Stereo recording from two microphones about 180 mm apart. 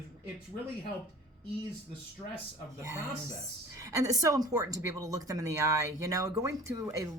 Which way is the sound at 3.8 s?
20° right (ahead or behind).